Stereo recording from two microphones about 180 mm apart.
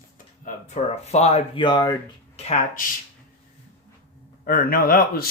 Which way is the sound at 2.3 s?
35° left (ahead or behind).